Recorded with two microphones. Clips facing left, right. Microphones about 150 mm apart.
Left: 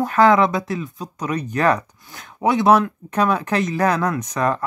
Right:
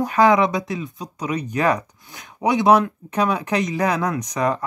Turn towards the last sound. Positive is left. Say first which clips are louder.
# left 1 dB
turn(degrees=-15)  # may be behind; listen again after turning